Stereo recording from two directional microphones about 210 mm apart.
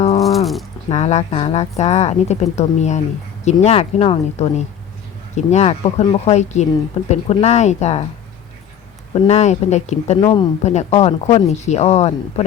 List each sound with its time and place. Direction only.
0.2 s a sound: centre (ahead or behind)
0.9 s speech: 30° left (ahead or behind)
9.2 s speech: 30° left (ahead or behind)